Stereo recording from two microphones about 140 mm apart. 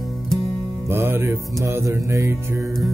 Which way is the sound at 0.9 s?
15° right (ahead or behind).